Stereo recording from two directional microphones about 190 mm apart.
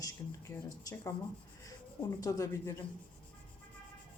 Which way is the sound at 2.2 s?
15° left (ahead or behind).